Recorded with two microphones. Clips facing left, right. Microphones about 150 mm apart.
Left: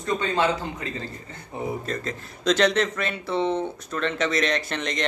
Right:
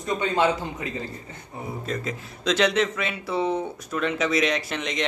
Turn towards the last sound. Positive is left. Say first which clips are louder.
# left 1 dB
turn(degrees=-5)  # may be behind; listen again after turning